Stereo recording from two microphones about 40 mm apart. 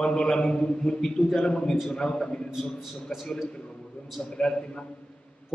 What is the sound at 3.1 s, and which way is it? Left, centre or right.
Speech, centre.